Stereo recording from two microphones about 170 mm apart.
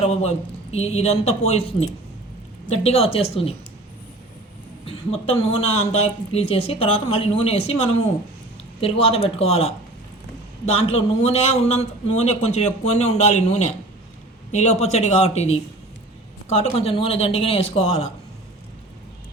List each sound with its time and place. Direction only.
0.0 s a man's voice: 40° left (ahead or behind)
2.8 s a man's voice: 35° left (ahead or behind)
4.9 s a man's voice: 35° left (ahead or behind)
10.8 s a man's voice: 35° left (ahead or behind)